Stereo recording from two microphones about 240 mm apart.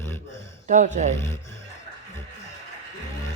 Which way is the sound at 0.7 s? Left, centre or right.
Right.